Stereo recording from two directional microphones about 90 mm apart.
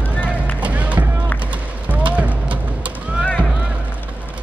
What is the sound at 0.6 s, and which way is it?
Music, 15° right (ahead or behind).